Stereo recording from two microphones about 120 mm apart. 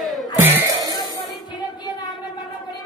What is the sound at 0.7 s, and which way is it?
Music, 30° right (ahead or behind).